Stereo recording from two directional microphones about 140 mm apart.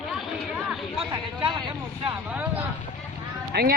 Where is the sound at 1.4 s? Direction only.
35° right (ahead or behind).